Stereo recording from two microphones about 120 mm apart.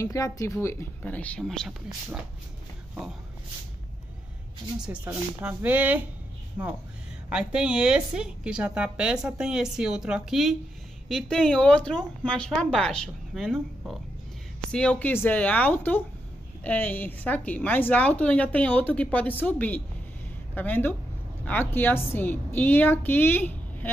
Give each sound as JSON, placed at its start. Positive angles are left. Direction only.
{"t": 0.0, "sound": "speech", "side_deg": 25}
{"t": 4.7, "sound": "a woman's voice", "side_deg": -10}